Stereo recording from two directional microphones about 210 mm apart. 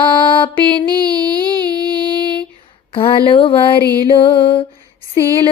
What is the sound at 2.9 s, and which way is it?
Mantra, 25° left (ahead or behind).